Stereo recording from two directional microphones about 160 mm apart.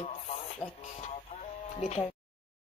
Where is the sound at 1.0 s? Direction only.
45° left (ahead or behind).